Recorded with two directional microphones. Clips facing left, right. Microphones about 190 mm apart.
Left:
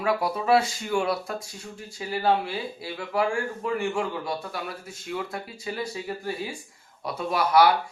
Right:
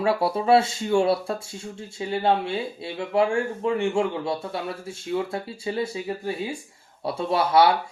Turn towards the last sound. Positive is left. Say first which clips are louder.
# right 1 dB
turn(degrees=-25)  # may be behind; listen again after turning